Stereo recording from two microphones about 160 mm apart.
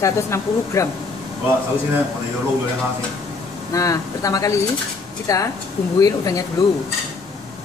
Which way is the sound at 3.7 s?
20° left (ahead or behind).